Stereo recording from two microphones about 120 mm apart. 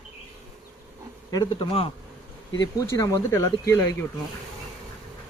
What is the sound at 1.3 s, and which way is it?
Speech, 40° left (ahead or behind).